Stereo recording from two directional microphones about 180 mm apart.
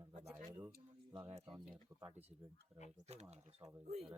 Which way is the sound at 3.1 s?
35° right (ahead or behind).